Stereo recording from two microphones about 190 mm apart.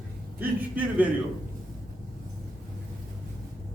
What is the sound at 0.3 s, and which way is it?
Speech, 10° right (ahead or behind).